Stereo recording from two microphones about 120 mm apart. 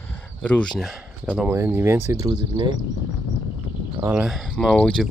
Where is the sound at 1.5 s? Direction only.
20° right (ahead or behind).